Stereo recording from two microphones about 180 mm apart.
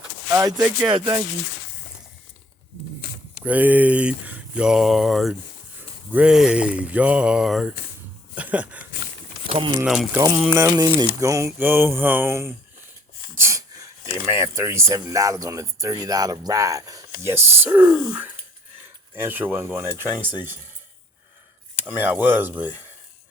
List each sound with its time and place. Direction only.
0.3 s speech: 20° right (ahead or behind)
3.4 s speech: 10° right (ahead or behind)
8.4 s a sound: 10° right (ahead or behind)
9.8 s speech: centre (ahead or behind)
13.3 s a sound: 15° right (ahead or behind)
14.3 s speech: 15° right (ahead or behind)
21.8 s speech: 10° right (ahead or behind)